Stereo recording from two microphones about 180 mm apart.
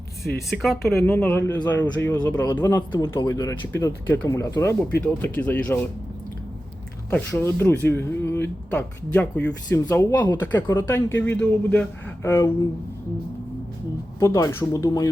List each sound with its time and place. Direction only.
0.5 s speech: centre (ahead or behind)
7.1 s speech: 10° left (ahead or behind)
14.2 s speech: 15° left (ahead or behind)